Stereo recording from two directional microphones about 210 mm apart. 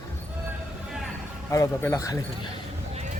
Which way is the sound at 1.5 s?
15° left (ahead or behind).